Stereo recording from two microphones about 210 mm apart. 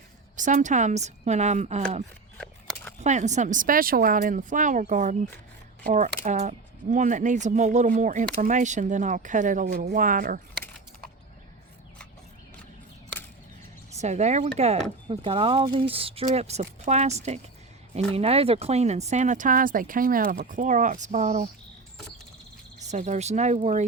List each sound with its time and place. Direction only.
0.3 s speech: 35° right (ahead or behind)
2.4 s a sound: 5° left (ahead or behind)
3.0 s speech: 35° right (ahead or behind)
13.9 s speech: 35° right (ahead or behind)
22.8 s speech: 35° right (ahead or behind)